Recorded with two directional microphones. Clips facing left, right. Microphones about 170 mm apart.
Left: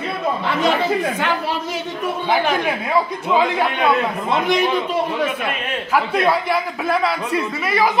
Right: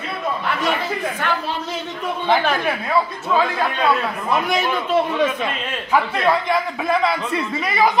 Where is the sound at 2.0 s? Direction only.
10° left (ahead or behind).